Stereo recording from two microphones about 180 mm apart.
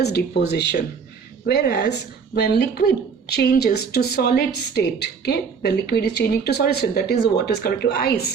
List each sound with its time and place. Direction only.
0.0 s a woman's voice: 65° left (ahead or behind)